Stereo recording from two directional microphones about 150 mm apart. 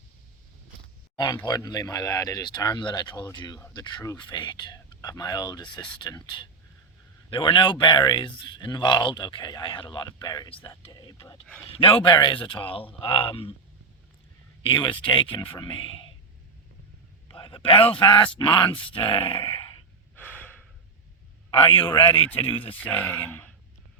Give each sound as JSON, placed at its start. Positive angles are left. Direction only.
{"t": 1.1, "sound": "speech", "side_deg": 25}
{"t": 14.6, "sound": "speech", "side_deg": 35}
{"t": 17.2, "sound": "speech", "side_deg": 35}
{"t": 20.1, "sound": "breathing", "side_deg": 10}
{"t": 21.5, "sound": "speech", "side_deg": 35}
{"t": 22.7, "sound": "speech", "side_deg": 10}